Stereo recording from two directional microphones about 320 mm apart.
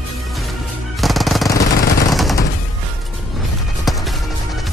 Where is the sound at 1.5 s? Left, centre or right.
Left.